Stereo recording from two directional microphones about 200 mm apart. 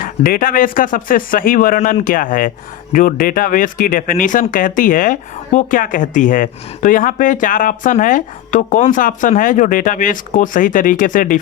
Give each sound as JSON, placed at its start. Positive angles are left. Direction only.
{"t": 0.0, "sound": "speech", "side_deg": 45}